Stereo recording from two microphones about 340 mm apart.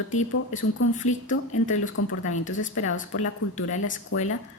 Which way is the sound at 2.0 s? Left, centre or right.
Left.